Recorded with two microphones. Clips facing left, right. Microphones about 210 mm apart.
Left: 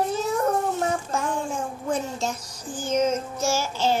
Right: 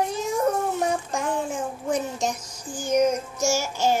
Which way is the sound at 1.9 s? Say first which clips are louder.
Right 1 dB; 15° right (ahead or behind).